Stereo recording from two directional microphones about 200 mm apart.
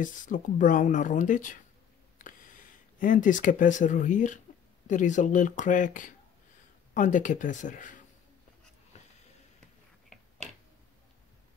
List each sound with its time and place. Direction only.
0.0 s speech: 40° left (ahead or behind)
3.0 s speech: 40° left (ahead or behind)
8.9 s a sound: 35° left (ahead or behind)